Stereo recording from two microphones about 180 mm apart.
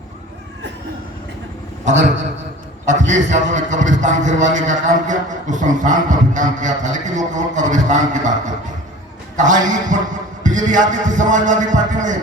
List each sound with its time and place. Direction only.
1.8 s a man's voice: 40° right (ahead or behind)
9.3 s a man's voice: 45° right (ahead or behind)